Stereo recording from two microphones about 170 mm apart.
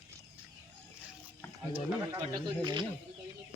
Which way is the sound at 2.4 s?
25° right (ahead or behind).